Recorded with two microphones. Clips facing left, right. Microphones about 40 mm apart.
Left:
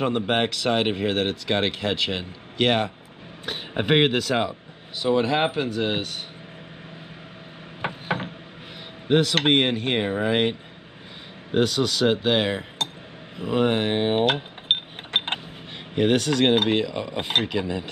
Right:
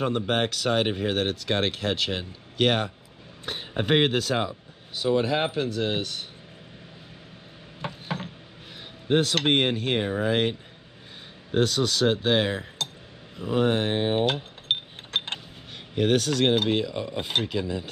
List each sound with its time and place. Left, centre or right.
0.1 s speech: left
7.8 s a sound: left
9.1 s speech: left
11.5 s speech: centre
13.4 s a sound: left
15.9 s speech: left